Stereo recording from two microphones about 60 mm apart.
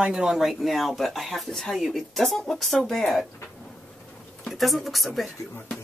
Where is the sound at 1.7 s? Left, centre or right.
Centre.